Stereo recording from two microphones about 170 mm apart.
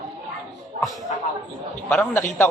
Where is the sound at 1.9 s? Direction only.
10° left (ahead or behind).